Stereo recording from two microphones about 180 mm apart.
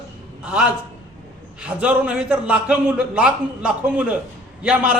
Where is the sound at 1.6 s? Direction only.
5° right (ahead or behind).